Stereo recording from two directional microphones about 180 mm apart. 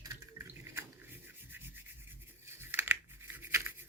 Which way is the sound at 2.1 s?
15° right (ahead or behind).